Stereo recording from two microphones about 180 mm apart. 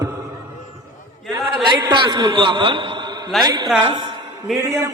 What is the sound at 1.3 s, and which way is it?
A man's voice, 25° right (ahead or behind).